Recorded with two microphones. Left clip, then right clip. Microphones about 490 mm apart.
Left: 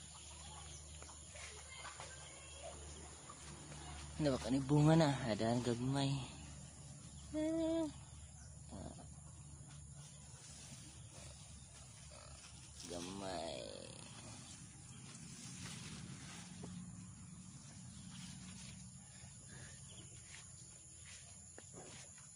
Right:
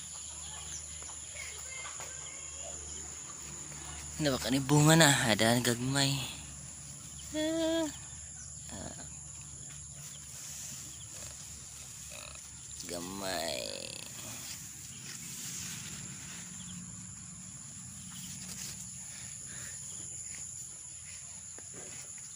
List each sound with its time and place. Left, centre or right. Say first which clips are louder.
4.2 s speech: right 6 dB; left
7.3 s cricket: right 7 dB; left
12.9 s a sound: right 8 dB; left